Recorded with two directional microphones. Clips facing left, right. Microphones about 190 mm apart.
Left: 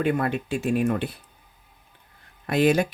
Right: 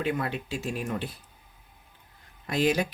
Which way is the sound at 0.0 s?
50° left (ahead or behind).